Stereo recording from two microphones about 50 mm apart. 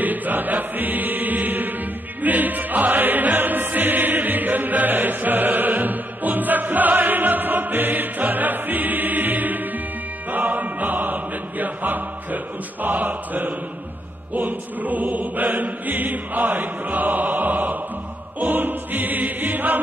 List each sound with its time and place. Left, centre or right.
0.0 s music: right
10.3 s chant: right
12.8 s choir: right
18.4 s music: right